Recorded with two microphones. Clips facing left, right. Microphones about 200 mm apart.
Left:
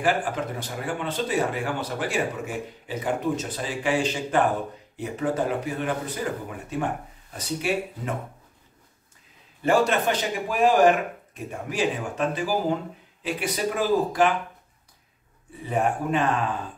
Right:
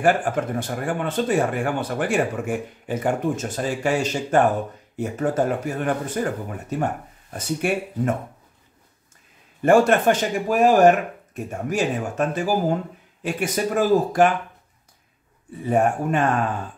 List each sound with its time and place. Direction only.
0.0 s speech: 50° right (ahead or behind)
7.3 s speech: 50° right (ahead or behind)
9.6 s speech: 50° right (ahead or behind)
15.7 s speech: 45° right (ahead or behind)